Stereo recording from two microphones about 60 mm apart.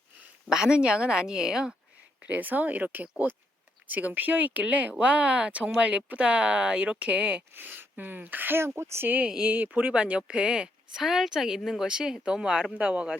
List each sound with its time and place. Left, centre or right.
0.5 s speech: centre
2.2 s speech: right
7.5 s speech: right
9.3 s speech: centre
11.0 s speech: centre; by 13.1 s right